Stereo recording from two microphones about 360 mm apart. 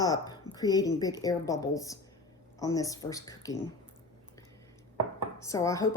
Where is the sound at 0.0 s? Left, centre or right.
Centre.